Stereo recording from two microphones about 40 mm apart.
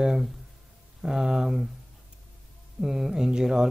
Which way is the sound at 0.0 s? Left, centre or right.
Centre.